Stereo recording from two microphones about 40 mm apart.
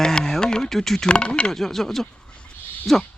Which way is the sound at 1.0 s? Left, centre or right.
Left.